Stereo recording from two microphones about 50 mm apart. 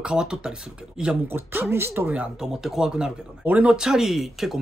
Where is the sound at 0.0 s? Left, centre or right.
Centre.